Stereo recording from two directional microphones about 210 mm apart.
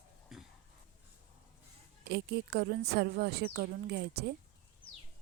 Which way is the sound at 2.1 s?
50° right (ahead or behind).